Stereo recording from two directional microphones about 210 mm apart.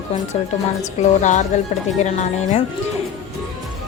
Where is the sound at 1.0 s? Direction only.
35° left (ahead or behind).